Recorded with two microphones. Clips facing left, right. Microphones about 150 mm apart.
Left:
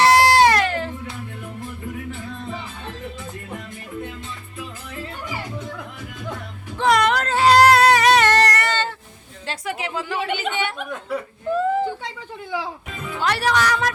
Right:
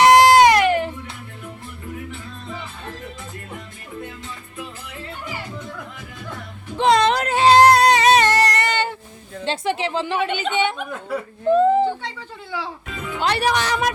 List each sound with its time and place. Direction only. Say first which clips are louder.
0.0 s a sound: right 3 dB; 20° right (ahead or behind)
6.7 s music: right 2 dB; 25° right (ahead or behind)
9.5 s a woman's voice: right 5 dB; 30° right (ahead or behind)
11.4 s a sound: right 6 dB; 25° right (ahead or behind)
12.5 s speech: left 2 dB; 15° left (ahead or behind)
13.1 s a woman's voice: even; 20° right (ahead or behind)